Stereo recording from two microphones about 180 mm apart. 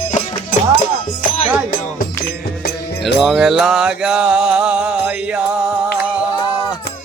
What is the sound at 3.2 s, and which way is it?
Mantra, centre (ahead or behind).